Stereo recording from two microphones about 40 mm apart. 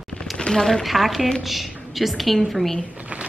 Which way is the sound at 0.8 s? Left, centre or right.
Centre.